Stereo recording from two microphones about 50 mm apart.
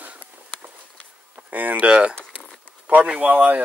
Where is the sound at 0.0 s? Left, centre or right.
Right.